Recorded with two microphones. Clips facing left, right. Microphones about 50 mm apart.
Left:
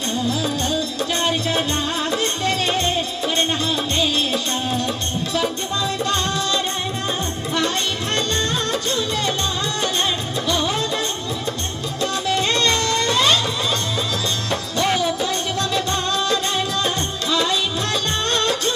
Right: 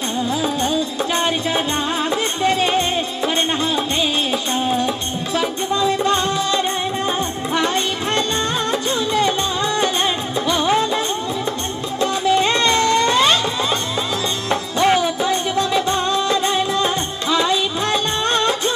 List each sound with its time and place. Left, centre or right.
0.3 s music: right
10.4 s music: right
12.0 s music: right
14.5 s music: right